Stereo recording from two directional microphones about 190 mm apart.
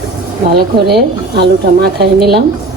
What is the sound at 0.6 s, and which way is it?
Speech, 60° right (ahead or behind).